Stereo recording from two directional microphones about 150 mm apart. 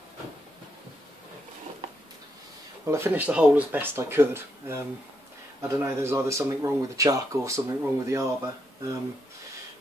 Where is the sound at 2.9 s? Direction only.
15° right (ahead or behind).